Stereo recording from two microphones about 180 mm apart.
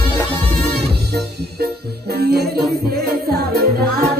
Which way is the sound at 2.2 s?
60° right (ahead or behind).